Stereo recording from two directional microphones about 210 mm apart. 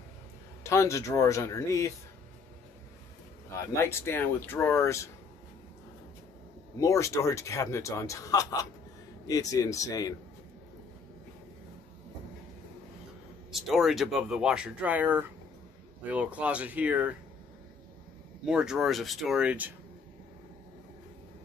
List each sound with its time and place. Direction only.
0.7 s speech: 15° left (ahead or behind)
3.7 s speech: 10° left (ahead or behind)
6.8 s speech: 15° left (ahead or behind)
13.5 s speech: centre (ahead or behind)
18.4 s speech: 5° right (ahead or behind)